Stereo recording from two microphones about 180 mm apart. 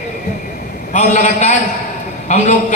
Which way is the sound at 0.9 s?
40° left (ahead or behind).